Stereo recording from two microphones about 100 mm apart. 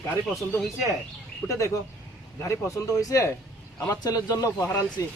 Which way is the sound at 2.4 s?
30° left (ahead or behind).